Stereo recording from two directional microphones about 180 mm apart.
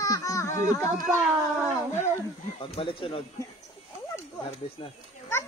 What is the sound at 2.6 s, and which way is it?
Speech, 30° left (ahead or behind).